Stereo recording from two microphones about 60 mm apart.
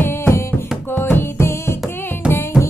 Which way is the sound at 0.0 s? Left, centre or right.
Left.